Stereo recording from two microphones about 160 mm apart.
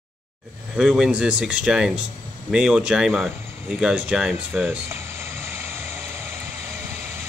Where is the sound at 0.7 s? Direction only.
5° right (ahead or behind).